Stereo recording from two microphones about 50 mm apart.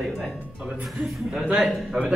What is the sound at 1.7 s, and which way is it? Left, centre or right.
Speech, centre.